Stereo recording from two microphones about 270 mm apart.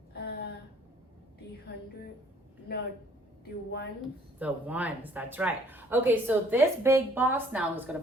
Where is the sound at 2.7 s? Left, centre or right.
Left.